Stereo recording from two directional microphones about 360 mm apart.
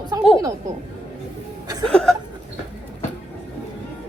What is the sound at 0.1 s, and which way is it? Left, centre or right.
Speech, centre.